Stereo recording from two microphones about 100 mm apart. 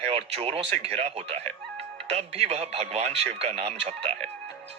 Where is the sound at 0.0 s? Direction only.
90° right.